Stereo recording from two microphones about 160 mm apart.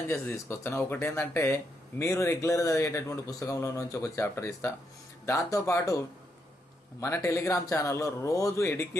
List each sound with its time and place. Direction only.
0.1 s speech: 15° left (ahead or behind)
7.0 s speech: 20° left (ahead or behind)